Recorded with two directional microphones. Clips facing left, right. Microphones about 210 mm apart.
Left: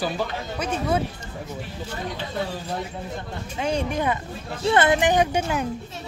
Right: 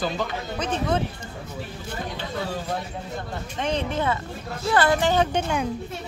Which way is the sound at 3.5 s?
10° left (ahead or behind).